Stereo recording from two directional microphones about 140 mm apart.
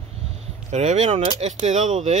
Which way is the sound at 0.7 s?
55° right (ahead or behind).